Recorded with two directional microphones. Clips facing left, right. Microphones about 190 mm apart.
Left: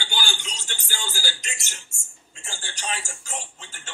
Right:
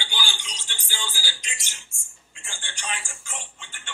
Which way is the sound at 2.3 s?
40° left (ahead or behind).